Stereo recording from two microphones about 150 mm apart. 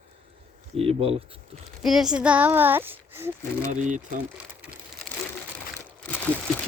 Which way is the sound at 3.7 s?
55° right (ahead or behind).